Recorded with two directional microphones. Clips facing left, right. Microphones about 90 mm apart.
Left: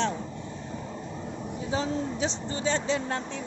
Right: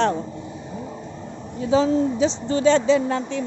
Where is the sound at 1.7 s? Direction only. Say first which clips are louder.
Right 11 dB; 90° right.